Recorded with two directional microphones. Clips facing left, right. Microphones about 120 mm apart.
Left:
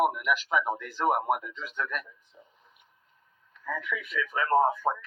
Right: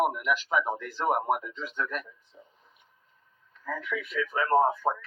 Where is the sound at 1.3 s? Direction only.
30° right (ahead or behind).